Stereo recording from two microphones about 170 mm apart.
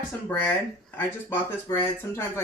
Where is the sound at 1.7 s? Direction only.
10° left (ahead or behind).